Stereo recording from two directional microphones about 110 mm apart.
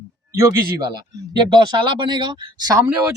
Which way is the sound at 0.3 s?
35° right (ahead or behind).